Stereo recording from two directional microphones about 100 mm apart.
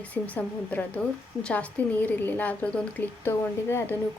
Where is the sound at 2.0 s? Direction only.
15° left (ahead or behind).